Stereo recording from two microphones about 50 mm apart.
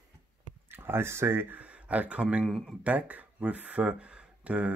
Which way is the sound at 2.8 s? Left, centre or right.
Right.